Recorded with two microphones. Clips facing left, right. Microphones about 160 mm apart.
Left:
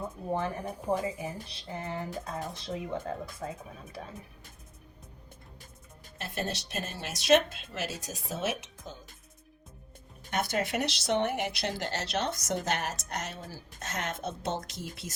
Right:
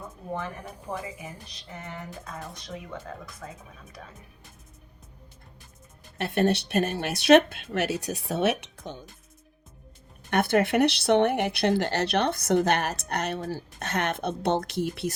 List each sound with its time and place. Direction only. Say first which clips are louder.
0.3 s speech: left 2 dB; 30° left (ahead or behind)
0.9 s speech: left 5 dB; 10° left (ahead or behind)
1.2 s speech: left 4 dB; 30° left (ahead or behind)
6.1 s speech: right 11 dB; 70° right (ahead or behind)
10.2 s speech: right 8 dB; 60° right (ahead or behind)